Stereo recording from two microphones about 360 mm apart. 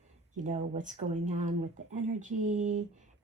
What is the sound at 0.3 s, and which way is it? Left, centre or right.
Speech, centre.